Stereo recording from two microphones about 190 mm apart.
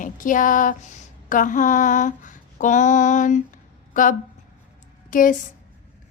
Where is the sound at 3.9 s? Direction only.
45° left (ahead or behind).